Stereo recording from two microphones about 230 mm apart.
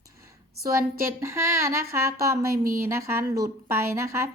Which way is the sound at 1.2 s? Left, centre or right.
Centre.